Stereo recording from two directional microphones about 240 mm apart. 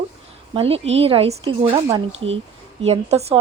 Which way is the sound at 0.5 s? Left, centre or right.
Right.